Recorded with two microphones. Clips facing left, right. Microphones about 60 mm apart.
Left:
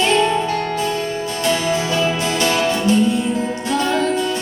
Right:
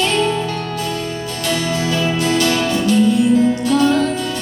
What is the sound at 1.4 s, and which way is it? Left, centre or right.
Music, left.